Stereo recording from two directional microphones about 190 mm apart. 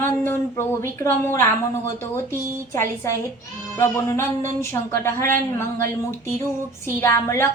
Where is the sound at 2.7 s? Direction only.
15° left (ahead or behind).